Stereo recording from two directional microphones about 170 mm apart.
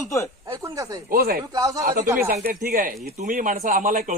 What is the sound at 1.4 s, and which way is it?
Speech, 20° right (ahead or behind).